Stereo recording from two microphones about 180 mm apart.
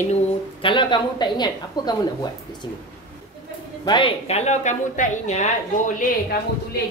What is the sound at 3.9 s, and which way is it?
A woman's voice, 30° left (ahead or behind).